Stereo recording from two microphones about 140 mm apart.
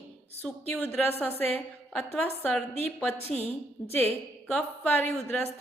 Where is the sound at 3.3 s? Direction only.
50° left (ahead or behind).